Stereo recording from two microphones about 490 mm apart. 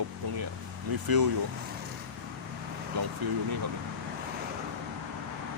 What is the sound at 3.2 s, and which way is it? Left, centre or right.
Speech, right.